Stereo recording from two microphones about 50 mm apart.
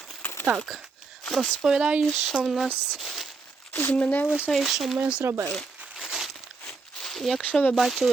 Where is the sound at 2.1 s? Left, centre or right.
Centre.